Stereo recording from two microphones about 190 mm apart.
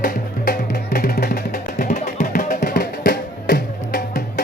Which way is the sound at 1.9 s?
35° left (ahead or behind).